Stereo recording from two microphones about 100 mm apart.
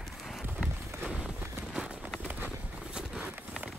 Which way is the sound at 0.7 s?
25° right (ahead or behind).